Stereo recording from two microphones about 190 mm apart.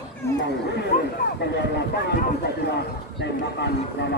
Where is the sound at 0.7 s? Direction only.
55° left (ahead or behind).